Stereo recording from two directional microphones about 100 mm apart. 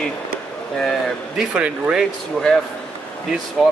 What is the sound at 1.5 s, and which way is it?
Speech, 10° right (ahead or behind).